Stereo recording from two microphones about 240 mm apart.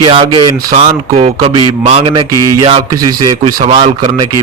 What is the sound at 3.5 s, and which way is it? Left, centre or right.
Speech, right.